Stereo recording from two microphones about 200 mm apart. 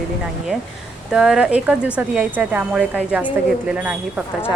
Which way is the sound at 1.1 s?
5° right (ahead or behind).